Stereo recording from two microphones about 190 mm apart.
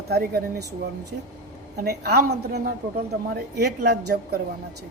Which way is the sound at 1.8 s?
55° right (ahead or behind).